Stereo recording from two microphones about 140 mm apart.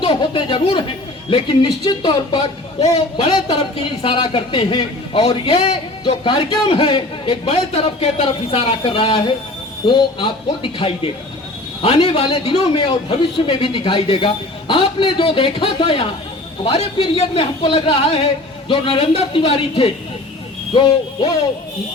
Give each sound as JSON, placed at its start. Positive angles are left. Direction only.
{"t": 0.0, "sound": "a man's voice", "side_deg": 35}